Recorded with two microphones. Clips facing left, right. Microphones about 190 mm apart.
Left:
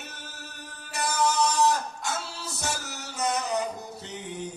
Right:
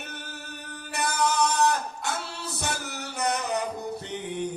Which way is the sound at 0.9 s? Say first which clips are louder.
Even; 60° right (ahead or behind).